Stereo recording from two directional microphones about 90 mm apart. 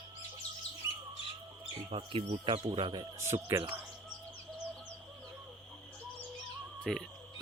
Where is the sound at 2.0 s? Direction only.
80° right.